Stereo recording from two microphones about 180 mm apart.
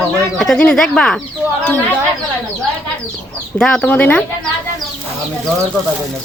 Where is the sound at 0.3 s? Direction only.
5° left (ahead or behind).